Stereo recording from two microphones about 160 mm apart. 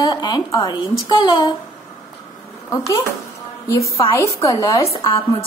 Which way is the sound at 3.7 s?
20° left (ahead or behind).